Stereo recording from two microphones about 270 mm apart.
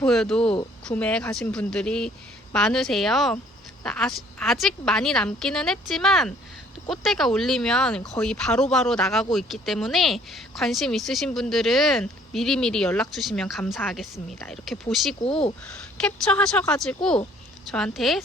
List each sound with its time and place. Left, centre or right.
0.0 s speech: centre
15.2 s speech: left
16.0 s speech: centre